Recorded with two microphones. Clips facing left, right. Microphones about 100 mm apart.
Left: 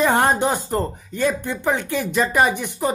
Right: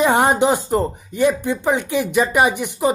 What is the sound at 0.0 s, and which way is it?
Speech, 15° right (ahead or behind).